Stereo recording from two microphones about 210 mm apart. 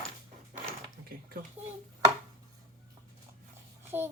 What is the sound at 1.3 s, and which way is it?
Speech, 45° right (ahead or behind).